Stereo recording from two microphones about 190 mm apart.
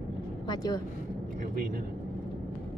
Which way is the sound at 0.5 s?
20° left (ahead or behind).